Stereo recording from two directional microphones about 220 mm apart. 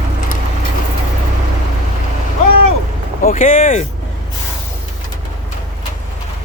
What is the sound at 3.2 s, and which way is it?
Speech, 40° left (ahead or behind).